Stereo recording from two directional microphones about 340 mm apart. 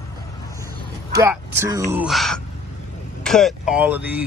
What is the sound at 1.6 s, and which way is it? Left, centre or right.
Speech, centre.